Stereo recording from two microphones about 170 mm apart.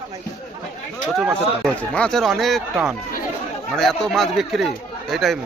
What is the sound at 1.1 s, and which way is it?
Speech, 5° right (ahead or behind).